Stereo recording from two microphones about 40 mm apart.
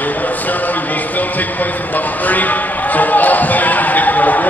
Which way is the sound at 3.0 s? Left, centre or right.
Left.